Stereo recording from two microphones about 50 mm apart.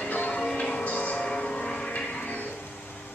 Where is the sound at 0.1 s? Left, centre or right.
Left.